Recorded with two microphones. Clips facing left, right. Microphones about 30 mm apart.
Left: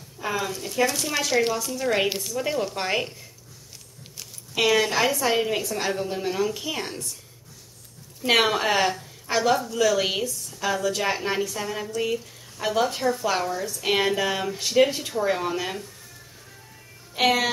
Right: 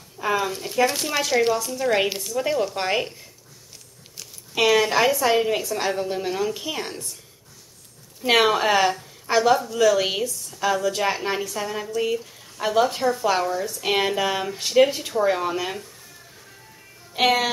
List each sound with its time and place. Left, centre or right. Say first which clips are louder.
0.2 s a woman's voice: right 4 dB; centre
4.2 s a sound: right 2 dB; centre
5.4 s a woman's voice: right 2 dB; centre
8.2 s a woman's voice: right 2 dB; centre
17.1 s a woman's voice: right 1 dB; centre